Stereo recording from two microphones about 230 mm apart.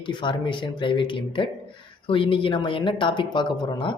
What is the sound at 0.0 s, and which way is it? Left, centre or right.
Speech, left.